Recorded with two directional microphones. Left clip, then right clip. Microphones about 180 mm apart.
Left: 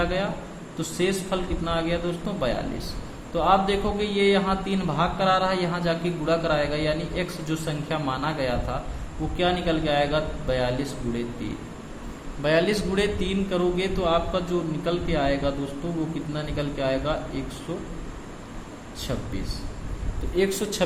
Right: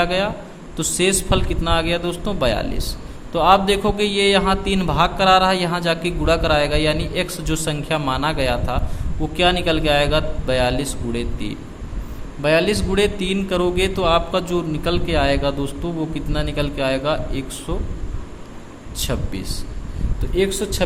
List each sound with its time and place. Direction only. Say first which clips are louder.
0.0 s a man's voice: right 7 dB; 35° right (ahead or behind)
18.9 s a man's voice: right 6 dB; 40° right (ahead or behind)
20.3 s speech: right 4 dB; 25° right (ahead or behind)